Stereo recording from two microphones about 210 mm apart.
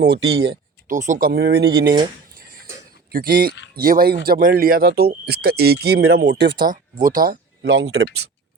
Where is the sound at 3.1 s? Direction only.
45° right (ahead or behind).